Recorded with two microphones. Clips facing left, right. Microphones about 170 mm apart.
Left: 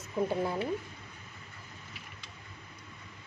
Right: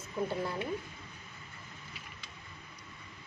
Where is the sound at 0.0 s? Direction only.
20° left (ahead or behind).